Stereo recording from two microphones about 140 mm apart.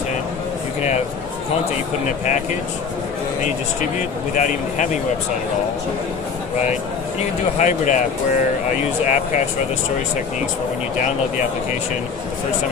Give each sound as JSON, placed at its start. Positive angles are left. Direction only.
{"t": 4.4, "sound": "speech", "side_deg": 60}
{"t": 7.5, "sound": "speech", "side_deg": 60}
{"t": 9.0, "sound": "speech", "side_deg": 60}